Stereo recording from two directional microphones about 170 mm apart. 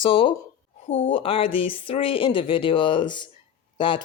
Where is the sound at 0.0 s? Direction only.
30° left (ahead or behind).